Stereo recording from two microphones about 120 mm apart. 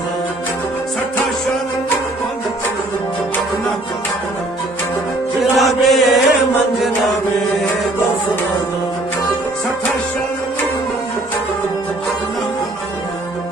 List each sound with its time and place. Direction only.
5.4 s chant: centre (ahead or behind)